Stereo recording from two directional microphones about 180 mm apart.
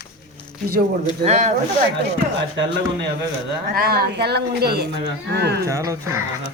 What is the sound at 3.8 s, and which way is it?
A woman's voice, 60° right (ahead or behind).